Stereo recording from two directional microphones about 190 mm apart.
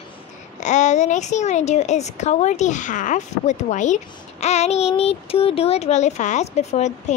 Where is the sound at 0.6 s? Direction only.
40° left (ahead or behind).